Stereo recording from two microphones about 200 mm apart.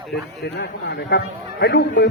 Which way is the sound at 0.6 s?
55° left (ahead or behind).